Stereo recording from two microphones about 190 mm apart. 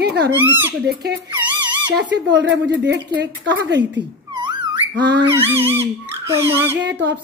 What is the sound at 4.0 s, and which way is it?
Cat, 25° right (ahead or behind).